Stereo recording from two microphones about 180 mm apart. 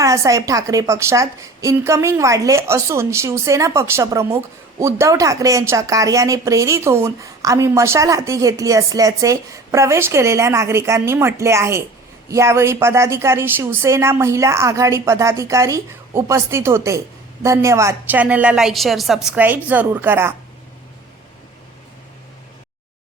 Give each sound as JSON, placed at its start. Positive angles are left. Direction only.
{"t": 0.0, "sound": "a woman's voice", "side_deg": -20}